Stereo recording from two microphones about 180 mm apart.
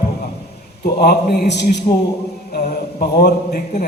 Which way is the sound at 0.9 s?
60° left (ahead or behind).